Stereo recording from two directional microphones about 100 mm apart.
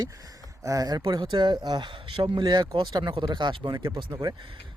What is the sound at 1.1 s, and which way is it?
Speech, 50° right (ahead or behind).